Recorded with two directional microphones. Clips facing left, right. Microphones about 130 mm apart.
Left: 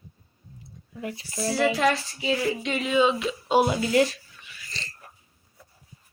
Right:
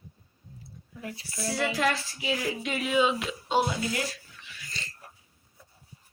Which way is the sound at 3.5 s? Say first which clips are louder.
Left 6 dB; 20° left (ahead or behind).